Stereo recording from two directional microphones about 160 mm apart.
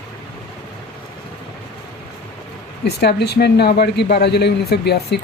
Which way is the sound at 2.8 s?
90° left.